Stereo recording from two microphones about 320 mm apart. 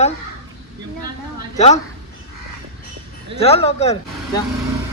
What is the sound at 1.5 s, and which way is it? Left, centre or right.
Speech, left.